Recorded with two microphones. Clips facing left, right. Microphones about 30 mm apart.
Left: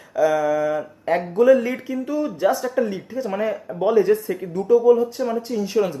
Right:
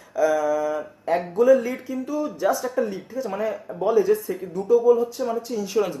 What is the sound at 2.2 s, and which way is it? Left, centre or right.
Speech, left.